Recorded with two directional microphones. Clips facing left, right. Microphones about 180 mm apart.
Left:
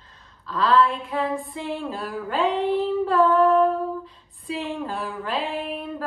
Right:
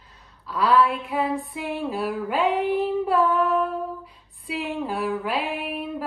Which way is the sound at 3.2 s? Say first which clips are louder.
Left 8 dB; centre (ahead or behind).